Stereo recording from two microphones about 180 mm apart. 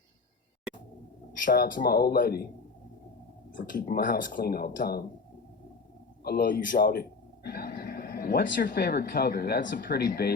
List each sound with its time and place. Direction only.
1.5 s speech: 50° left (ahead or behind)
3.5 s speech: 50° left (ahead or behind)
6.2 s speech: 55° left (ahead or behind); by 9.7 s 70° left (ahead or behind)
9.8 s speech: 60° left (ahead or behind)